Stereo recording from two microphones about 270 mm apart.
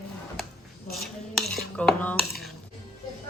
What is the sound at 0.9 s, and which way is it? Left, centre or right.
Cutlery, centre.